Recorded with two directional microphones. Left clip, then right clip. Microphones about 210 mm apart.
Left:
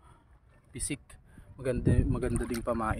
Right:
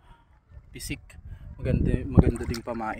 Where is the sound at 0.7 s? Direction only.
10° left (ahead or behind).